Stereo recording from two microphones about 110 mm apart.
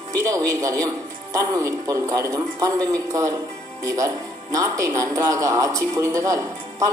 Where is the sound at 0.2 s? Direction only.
30° right (ahead or behind).